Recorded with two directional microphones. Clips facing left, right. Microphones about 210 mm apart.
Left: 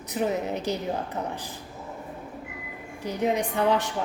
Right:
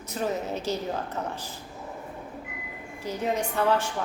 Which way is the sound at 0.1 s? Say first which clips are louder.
Left 2 dB; 15° left (ahead or behind).